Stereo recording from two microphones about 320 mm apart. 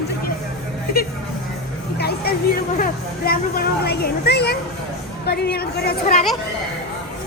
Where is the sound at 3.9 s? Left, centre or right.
Left.